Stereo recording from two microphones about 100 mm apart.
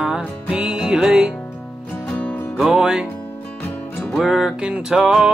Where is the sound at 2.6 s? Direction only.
5° right (ahead or behind).